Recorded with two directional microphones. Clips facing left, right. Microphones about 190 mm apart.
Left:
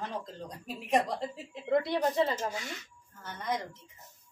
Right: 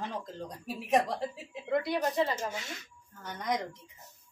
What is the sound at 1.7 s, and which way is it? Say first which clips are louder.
Speech: left 2 dB; 25° left (ahead or behind).